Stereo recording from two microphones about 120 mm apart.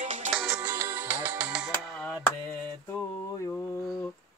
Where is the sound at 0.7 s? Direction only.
15° right (ahead or behind).